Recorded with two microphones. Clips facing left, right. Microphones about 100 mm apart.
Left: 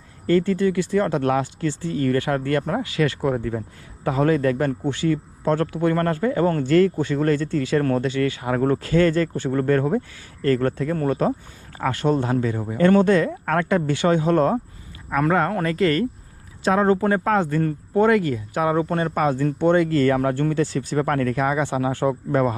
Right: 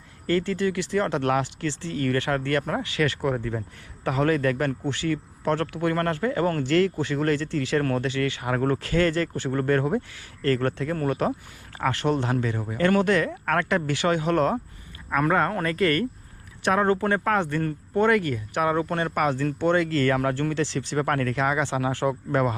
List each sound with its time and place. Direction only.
0.4 s a man's voice: 30° left (ahead or behind)
3.3 s speech: 50° left (ahead or behind)
4.0 s a man's voice: 25° left (ahead or behind)
13.4 s speech: 40° left (ahead or behind)
13.7 s a man's voice: 25° left (ahead or behind)
15.3 s a man's voice: 35° left (ahead or behind)